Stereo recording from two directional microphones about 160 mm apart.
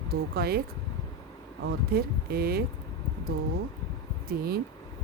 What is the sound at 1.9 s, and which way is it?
Speech, 75° right (ahead or behind).